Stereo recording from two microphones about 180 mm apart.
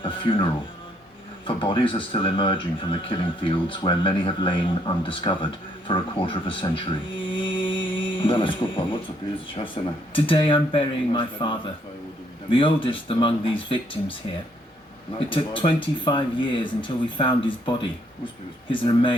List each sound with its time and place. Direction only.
0.0 s speech: 30° left (ahead or behind)
1.5 s speech: 30° left (ahead or behind)
7.3 s music: 25° left (ahead or behind)
9.7 s speech: 30° left (ahead or behind)
15.3 s speech: 25° left (ahead or behind)